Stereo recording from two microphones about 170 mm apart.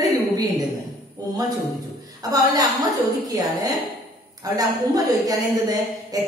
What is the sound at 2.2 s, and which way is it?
A woman's voice, 20° right (ahead or behind).